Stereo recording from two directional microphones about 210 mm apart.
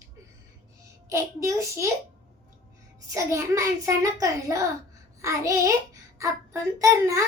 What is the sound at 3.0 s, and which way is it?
A child's voice, 15° right (ahead or behind).